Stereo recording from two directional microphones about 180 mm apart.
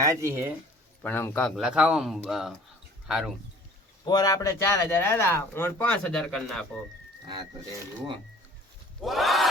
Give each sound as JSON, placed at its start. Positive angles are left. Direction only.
{"t": 0.0, "sound": "speech", "side_deg": -15}
{"t": 1.0, "sound": "speech", "side_deg": 10}
{"t": 4.0, "sound": "speech", "side_deg": 20}
{"t": 9.0, "sound": "speech", "side_deg": 0}